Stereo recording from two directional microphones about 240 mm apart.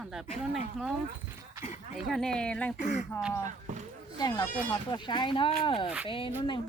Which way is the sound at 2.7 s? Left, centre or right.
Left.